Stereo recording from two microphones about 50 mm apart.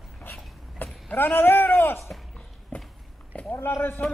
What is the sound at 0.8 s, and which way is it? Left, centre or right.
Vehicle, left.